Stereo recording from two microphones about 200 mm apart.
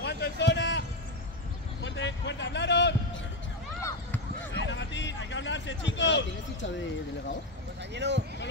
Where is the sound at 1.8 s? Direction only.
65° left (ahead or behind).